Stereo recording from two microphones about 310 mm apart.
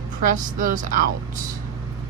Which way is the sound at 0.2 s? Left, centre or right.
Right.